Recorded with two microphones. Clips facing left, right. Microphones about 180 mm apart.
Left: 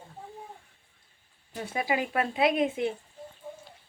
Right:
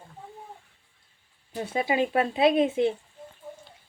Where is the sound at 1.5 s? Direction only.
25° right (ahead or behind).